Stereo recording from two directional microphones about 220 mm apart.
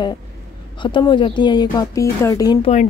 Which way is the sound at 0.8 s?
20° left (ahead or behind).